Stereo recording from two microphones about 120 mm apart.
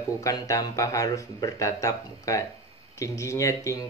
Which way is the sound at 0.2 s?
30° left (ahead or behind).